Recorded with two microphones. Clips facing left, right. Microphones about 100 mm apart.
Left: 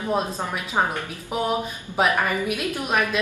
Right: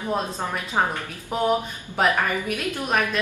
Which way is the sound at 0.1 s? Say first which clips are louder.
Left 1 dB; 15° left (ahead or behind).